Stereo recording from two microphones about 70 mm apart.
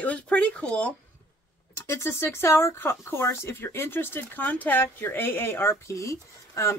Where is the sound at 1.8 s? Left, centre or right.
Left.